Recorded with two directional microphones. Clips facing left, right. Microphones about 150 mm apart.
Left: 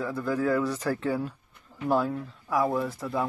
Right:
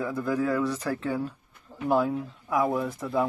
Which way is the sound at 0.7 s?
35° left (ahead or behind).